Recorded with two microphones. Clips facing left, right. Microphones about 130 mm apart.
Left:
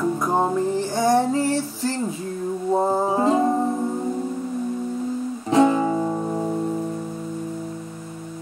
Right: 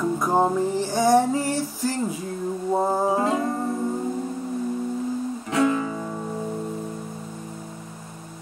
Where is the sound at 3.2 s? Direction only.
25° left (ahead or behind).